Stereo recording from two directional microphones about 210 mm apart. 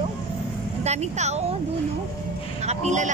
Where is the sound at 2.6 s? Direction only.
35° right (ahead or behind).